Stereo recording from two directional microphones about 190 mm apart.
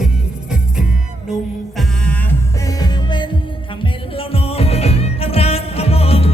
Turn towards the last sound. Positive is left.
turn(degrees=30)  # may be behind; listen again after turning